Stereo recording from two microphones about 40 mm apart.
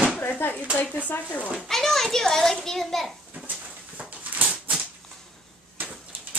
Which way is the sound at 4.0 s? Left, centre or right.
Right.